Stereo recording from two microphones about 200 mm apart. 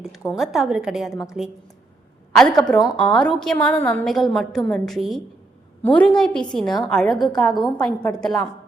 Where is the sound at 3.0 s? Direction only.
5° left (ahead or behind).